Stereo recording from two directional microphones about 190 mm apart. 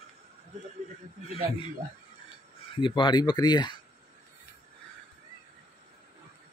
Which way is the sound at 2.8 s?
25° left (ahead or behind).